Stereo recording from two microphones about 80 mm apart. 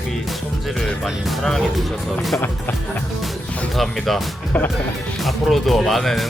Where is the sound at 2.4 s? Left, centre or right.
Left.